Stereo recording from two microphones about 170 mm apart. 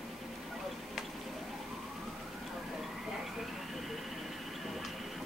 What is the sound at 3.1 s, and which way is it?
Vehicle, centre (ahead or behind).